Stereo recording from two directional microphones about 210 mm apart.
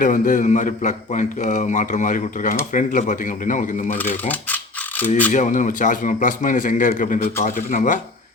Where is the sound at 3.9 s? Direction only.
10° left (ahead or behind).